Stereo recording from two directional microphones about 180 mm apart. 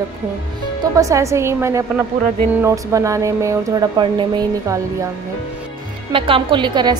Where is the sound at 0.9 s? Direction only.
15° right (ahead or behind).